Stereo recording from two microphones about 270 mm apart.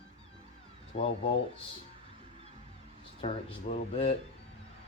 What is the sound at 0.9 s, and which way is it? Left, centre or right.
Speech, left.